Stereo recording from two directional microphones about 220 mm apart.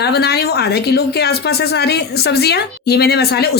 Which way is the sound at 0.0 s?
45° left (ahead or behind).